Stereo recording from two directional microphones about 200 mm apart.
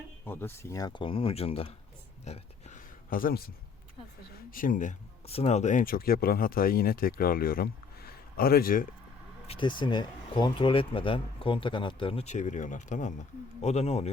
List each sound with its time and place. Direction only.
0.3 s speech: 10° left (ahead or behind); by 1.7 s 30° left (ahead or behind)
2.2 s a sound: 35° left (ahead or behind)
4.5 s speech: 40° left (ahead or behind)
9.5 s speech: 25° left (ahead or behind)